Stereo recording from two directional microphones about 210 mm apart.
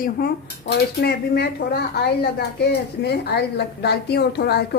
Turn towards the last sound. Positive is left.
turn(degrees=50)  # may be behind; listen again after turning